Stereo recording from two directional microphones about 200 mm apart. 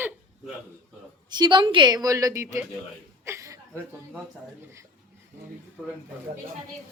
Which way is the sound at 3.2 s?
15° right (ahead or behind).